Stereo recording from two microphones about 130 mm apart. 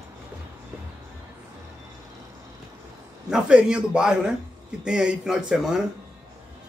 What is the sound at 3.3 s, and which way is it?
Speech, 5° right (ahead or behind).